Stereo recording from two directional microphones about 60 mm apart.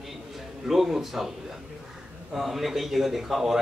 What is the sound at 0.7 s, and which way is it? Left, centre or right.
Speech, centre.